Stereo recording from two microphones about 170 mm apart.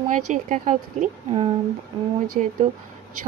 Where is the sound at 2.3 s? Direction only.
40° right (ahead or behind).